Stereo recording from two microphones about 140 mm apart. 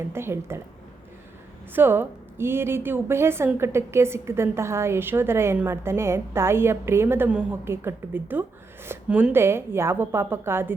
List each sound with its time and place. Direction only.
0.1 s a woman's voice: 15° right (ahead or behind)
1.7 s a woman's voice: 15° right (ahead or behind)